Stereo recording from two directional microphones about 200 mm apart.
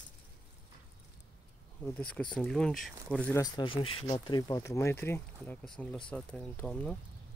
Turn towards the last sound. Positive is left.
turn(degrees=5)  # may be behind; listen again after turning